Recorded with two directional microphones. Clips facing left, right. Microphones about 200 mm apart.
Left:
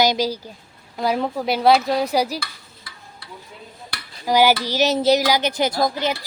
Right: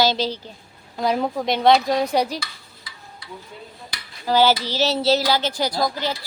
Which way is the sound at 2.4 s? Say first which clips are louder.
Left 1 dB; 55° left (ahead or behind).